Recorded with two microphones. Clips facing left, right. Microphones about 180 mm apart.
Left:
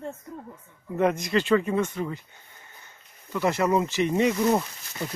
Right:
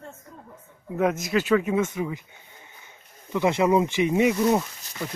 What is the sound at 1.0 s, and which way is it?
Speech, 5° right (ahead or behind).